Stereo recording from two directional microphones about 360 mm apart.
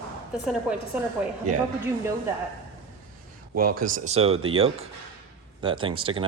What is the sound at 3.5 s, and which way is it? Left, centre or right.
Speech, right.